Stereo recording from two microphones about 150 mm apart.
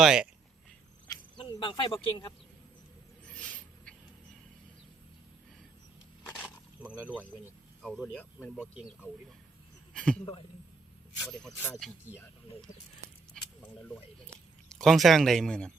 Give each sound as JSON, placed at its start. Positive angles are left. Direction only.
{"t": 0.0, "sound": "speech", "side_deg": -5}
{"t": 1.0, "sound": "cricket", "side_deg": 25}
{"t": 3.2, "sound": "a sound", "side_deg": 5}
{"t": 6.2, "sound": "a sound", "side_deg": 10}
{"t": 6.8, "sound": "speech", "side_deg": -10}
{"t": 7.8, "sound": "speech", "side_deg": 5}
{"t": 9.9, "sound": "speech", "side_deg": 5}
{"t": 11.2, "sound": "speech", "side_deg": 5}
{"t": 13.3, "sound": "a sound", "side_deg": 5}